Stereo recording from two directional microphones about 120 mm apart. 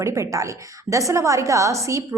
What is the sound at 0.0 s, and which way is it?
A woman's voice, 25° right (ahead or behind).